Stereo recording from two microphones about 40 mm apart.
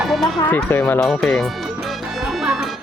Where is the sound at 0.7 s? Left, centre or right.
Left.